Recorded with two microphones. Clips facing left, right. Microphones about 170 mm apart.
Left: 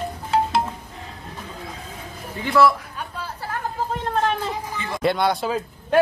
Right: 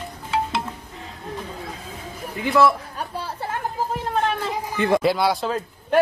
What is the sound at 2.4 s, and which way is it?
Speech, 20° right (ahead or behind).